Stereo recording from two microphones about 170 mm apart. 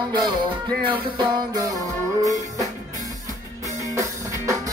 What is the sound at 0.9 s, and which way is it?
Music, 25° right (ahead or behind).